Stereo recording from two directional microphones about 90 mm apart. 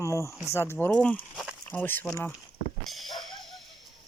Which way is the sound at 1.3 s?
5° right (ahead or behind).